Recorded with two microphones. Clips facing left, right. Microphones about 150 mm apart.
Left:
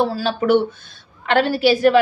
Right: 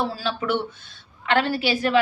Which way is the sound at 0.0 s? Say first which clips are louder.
Left 7 dB; 40° left (ahead or behind).